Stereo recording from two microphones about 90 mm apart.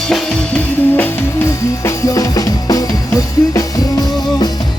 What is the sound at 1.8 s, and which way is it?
Music, 40° left (ahead or behind).